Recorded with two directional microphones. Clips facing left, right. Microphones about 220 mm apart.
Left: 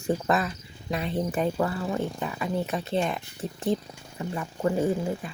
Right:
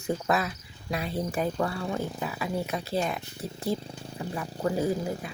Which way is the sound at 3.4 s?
20° left (ahead or behind).